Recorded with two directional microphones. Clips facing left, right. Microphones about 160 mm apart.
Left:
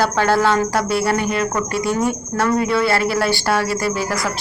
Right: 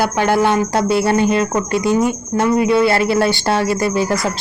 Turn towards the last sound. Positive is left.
turn(degrees=-25)  # may be behind; listen again after turning